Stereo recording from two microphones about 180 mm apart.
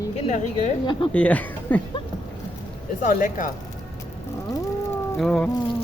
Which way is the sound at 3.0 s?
50° left (ahead or behind).